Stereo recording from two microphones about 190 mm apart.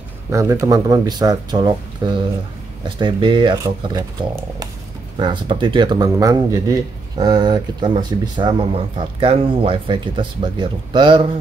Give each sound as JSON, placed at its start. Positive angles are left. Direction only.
{"t": 0.3, "sound": "speech", "side_deg": -15}